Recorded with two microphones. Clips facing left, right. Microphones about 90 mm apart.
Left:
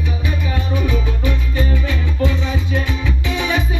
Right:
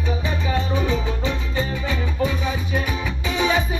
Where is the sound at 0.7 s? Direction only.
20° right (ahead or behind).